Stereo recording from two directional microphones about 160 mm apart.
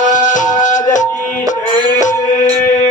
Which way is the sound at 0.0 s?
50° left (ahead or behind).